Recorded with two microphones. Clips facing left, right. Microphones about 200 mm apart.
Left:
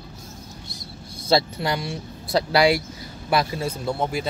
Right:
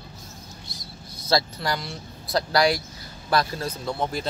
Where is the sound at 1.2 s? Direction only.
25° left (ahead or behind).